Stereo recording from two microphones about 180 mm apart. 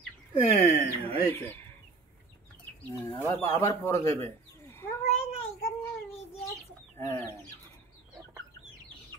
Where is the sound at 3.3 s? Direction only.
15° left (ahead or behind).